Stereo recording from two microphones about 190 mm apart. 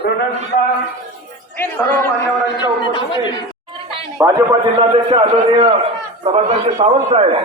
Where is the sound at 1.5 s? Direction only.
10° left (ahead or behind).